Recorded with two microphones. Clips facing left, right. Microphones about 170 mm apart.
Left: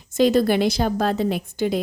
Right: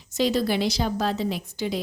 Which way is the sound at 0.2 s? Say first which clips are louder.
Left 6 dB; 50° left (ahead or behind).